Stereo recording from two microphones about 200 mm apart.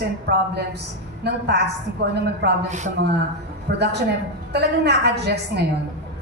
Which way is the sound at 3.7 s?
55° right (ahead or behind).